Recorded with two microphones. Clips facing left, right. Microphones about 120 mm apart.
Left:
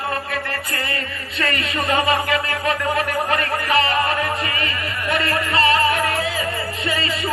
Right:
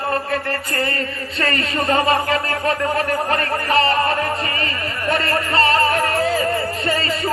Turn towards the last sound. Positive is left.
turn(degrees=-35)  # may be behind; listen again after turning